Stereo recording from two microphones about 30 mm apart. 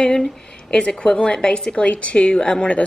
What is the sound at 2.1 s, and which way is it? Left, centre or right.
Speech, left.